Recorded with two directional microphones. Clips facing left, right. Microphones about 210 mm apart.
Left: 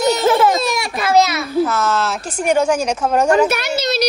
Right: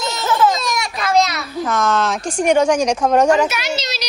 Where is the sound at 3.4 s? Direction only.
55° left (ahead or behind).